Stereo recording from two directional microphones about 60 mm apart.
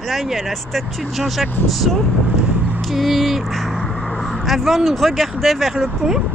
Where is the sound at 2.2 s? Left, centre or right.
Right.